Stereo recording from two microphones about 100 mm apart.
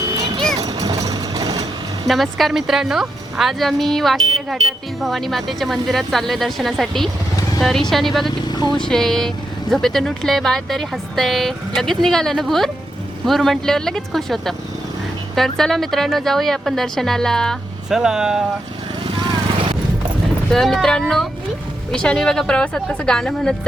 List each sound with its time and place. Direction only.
0.6 s vehicle: 40° right (ahead or behind)
2.0 s speech: centre (ahead or behind)
8.4 s speech: 45° left (ahead or behind)
8.9 s speech: 5° left (ahead or behind)
17.8 s speech: 5° right (ahead or behind)
19.0 s vehicle: 55° right (ahead or behind)
20.5 s speech: 5° left (ahead or behind)